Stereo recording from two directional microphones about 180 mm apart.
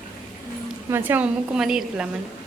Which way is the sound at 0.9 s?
10° right (ahead or behind).